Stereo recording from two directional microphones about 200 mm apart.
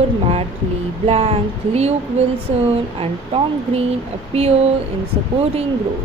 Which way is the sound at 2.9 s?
30° right (ahead or behind).